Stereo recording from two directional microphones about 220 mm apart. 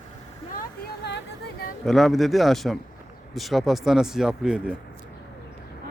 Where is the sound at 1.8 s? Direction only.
Centre (ahead or behind).